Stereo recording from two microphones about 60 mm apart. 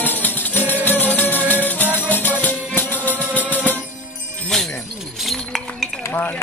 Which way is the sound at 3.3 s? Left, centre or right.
Right.